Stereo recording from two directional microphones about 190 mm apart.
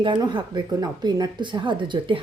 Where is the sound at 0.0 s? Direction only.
25° right (ahead or behind).